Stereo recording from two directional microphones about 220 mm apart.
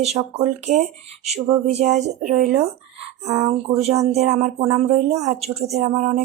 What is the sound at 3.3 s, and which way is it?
Speech, 20° right (ahead or behind).